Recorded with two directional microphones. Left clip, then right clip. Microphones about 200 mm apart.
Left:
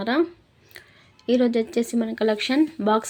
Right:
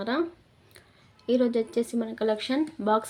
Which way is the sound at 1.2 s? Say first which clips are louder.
Left 4 dB; 35° left (ahead or behind).